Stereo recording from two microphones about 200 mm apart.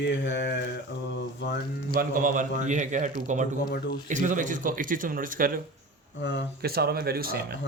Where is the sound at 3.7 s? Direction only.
55° left (ahead or behind).